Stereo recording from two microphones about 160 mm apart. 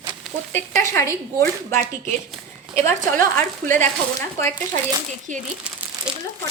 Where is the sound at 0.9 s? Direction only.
20° left (ahead or behind).